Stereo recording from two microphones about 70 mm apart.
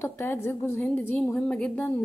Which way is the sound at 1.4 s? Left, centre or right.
Centre.